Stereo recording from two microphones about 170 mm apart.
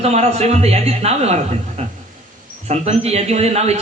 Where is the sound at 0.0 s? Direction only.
40° right (ahead or behind).